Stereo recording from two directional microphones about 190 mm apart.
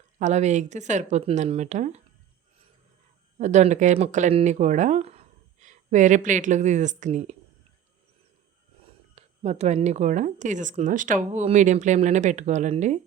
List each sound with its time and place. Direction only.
0.2 s speech: 40° right (ahead or behind)
3.3 s speech: 40° right (ahead or behind)
9.1 s speech: 35° right (ahead or behind)